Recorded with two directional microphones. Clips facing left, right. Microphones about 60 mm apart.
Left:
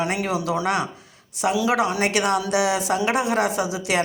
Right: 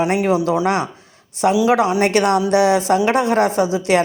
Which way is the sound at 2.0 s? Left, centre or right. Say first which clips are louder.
Right 6 dB; right.